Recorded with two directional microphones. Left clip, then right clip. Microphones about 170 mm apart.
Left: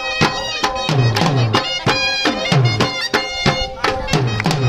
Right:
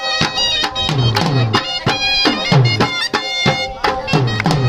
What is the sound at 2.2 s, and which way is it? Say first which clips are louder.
Music: right 2 dB; 5° left (ahead or behind).